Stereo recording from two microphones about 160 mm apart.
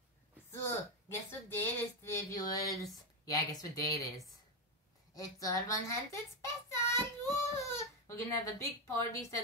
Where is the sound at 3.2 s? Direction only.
20° left (ahead or behind).